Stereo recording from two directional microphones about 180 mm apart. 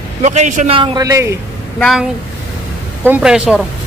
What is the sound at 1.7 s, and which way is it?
Speech, centre (ahead or behind).